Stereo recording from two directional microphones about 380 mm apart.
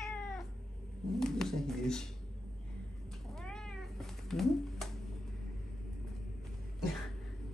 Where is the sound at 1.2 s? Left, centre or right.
Centre.